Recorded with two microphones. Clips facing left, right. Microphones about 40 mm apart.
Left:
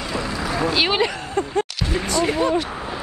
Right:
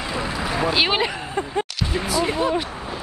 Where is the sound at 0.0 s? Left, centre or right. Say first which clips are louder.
Even; centre.